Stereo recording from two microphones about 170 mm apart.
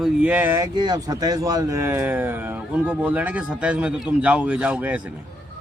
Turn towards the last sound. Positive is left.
turn(degrees=-10)  # may be behind; listen again after turning